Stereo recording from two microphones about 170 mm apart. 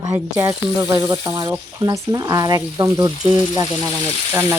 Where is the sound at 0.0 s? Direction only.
20° right (ahead or behind).